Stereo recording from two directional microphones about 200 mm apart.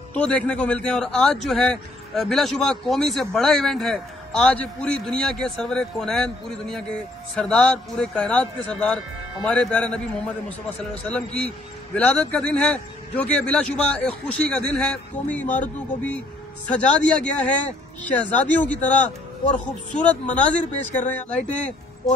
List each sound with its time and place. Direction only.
0.1 s a man's voice: 5° left (ahead or behind)
17.2 s speech: 5° left (ahead or behind)